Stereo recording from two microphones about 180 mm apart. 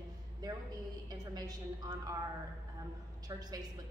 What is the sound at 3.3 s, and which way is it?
Speech, 20° right (ahead or behind).